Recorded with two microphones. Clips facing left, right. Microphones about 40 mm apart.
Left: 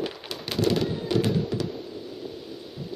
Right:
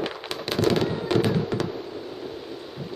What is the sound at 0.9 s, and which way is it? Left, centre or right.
Fireworks, right.